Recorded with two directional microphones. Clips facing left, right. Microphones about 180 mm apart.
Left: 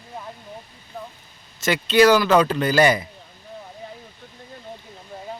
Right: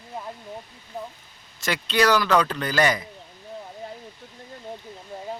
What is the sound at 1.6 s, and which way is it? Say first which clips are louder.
Speech: left 6 dB; 5° left (ahead or behind).